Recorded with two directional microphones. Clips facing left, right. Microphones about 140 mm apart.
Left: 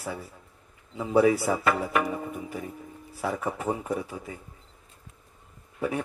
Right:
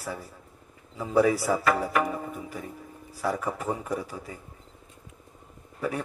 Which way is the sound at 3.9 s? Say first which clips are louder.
Left 1 dB; 35° right (ahead or behind).